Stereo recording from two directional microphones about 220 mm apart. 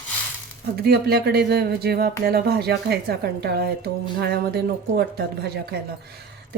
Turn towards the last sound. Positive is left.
turn(degrees=-45)  # may be behind; listen again after turning